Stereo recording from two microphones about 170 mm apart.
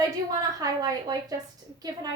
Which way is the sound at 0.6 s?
20° right (ahead or behind).